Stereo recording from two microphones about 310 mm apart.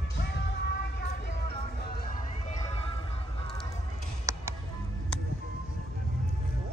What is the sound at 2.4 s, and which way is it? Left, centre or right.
Music, left.